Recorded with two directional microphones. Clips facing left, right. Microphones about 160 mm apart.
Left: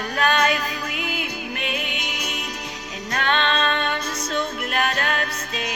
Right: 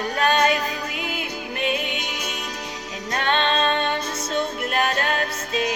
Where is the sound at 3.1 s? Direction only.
25° right (ahead or behind).